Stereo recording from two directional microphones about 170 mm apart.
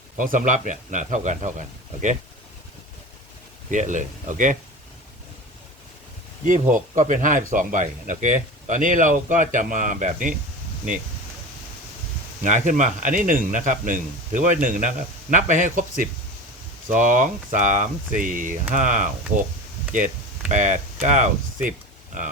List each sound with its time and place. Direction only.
0.2 s speech: 50° right (ahead or behind)
3.7 s speech: 45° right (ahead or behind)
6.4 s speech: 50° right (ahead or behind)
12.4 s speech: 45° right (ahead or behind)